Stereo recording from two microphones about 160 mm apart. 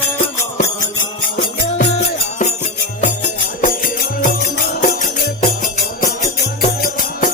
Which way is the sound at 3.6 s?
55° left (ahead or behind).